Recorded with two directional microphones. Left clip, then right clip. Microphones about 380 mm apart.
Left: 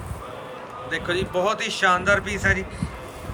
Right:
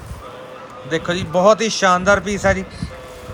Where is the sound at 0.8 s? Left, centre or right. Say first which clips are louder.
Right 4 dB; centre.